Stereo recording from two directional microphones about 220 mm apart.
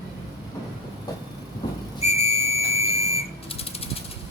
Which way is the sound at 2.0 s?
30° left (ahead or behind).